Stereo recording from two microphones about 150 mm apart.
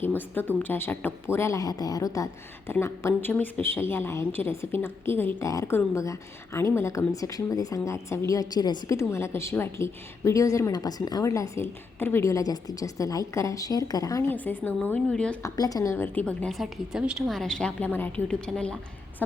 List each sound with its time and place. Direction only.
0.0 s a woman's voice: 15° left (ahead or behind)
15.4 s a woman's voice: 25° left (ahead or behind); by 18.8 s 5° left (ahead or behind)